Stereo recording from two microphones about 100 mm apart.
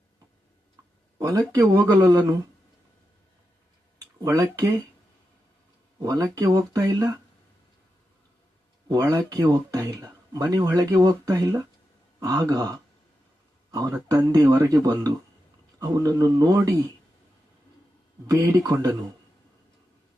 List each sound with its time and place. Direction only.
1.2 s speech: 40° right (ahead or behind)
3.9 s a sound: 35° right (ahead or behind)
6.0 s speech: 35° right (ahead or behind)
9.3 s speech: 40° right (ahead or behind)
18.3 s speech: 40° right (ahead or behind)